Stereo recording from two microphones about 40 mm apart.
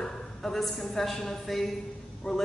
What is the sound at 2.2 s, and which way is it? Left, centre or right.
Speech, left.